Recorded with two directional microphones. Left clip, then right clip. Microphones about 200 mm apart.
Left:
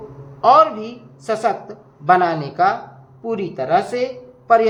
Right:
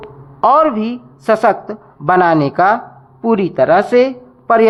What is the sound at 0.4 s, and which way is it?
A woman's voice, 35° right (ahead or behind).